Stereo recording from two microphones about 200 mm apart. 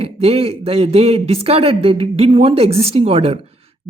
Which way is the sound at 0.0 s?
30° right (ahead or behind).